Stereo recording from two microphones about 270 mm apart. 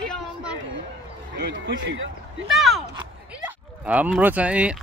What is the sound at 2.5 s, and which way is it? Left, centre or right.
Speech, centre.